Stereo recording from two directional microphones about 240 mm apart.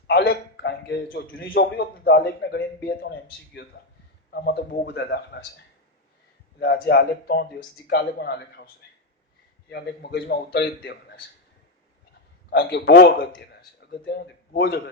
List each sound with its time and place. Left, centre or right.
0.1 s a man's voice: left
6.6 s a man's voice: left
12.5 s a man's voice: left